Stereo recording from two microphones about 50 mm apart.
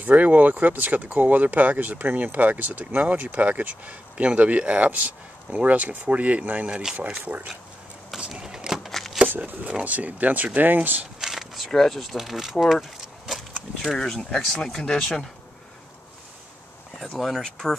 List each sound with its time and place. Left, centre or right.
0.0 s speech: right
8.4 s a sound: centre
9.3 s speech: right
9.7 s speech: right
11.1 s speech: centre
13.9 s speech: centre
17.0 s speech: centre